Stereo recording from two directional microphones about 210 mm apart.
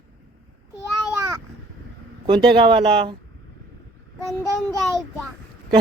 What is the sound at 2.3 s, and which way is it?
Speech, 25° right (ahead or behind).